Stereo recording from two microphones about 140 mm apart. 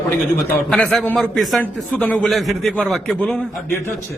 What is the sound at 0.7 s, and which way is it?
Speech, centre (ahead or behind).